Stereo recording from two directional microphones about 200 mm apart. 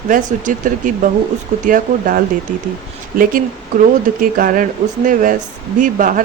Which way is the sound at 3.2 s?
45° right (ahead or behind).